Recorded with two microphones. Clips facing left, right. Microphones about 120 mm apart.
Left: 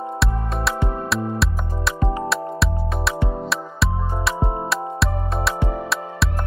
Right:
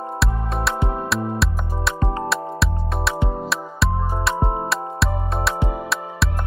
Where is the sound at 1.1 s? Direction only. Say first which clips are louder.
Even; centre (ahead or behind).